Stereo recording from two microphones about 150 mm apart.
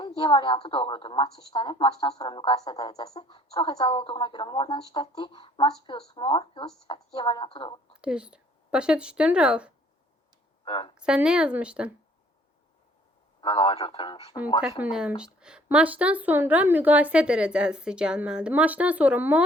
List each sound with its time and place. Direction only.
0.2 s a woman's voice: 30° left (ahead or behind)
8.0 s speech: 5° right (ahead or behind)
10.7 s a woman's voice: 35° left (ahead or behind)
10.9 s a woman's voice: 5° right (ahead or behind)
13.4 s a woman's voice: 35° left (ahead or behind)
14.7 s a woman's voice: 10° right (ahead or behind)